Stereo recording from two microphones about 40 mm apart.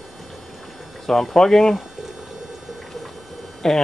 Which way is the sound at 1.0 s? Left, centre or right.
Centre.